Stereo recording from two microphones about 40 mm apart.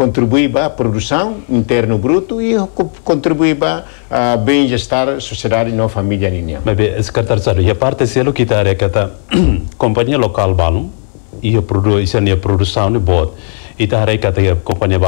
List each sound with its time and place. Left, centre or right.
0.0 s speech: centre